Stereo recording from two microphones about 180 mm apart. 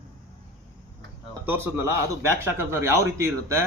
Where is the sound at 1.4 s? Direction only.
10° right (ahead or behind).